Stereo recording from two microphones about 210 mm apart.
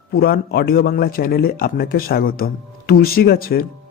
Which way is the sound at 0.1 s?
45° left (ahead or behind).